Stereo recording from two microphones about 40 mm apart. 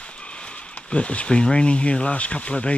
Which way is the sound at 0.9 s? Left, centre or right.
Left.